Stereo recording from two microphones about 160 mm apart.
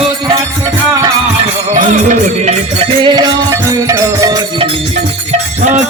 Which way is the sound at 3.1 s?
25° right (ahead or behind).